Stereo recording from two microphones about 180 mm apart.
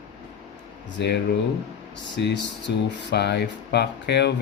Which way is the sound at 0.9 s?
70° left (ahead or behind).